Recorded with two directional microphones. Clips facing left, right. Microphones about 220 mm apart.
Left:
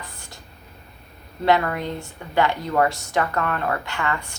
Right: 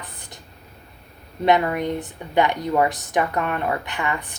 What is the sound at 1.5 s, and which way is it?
A woman's voice, 15° right (ahead or behind).